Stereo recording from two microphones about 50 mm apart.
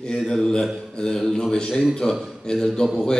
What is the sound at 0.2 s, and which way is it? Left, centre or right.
A man's voice, centre.